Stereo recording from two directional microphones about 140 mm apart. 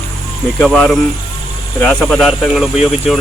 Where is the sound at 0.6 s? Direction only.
5° left (ahead or behind).